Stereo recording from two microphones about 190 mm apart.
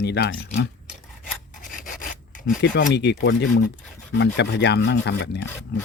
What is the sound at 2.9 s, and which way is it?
Speech, 60° left (ahead or behind).